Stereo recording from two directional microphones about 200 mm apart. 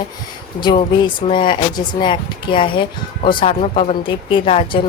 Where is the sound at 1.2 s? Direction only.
25° left (ahead or behind).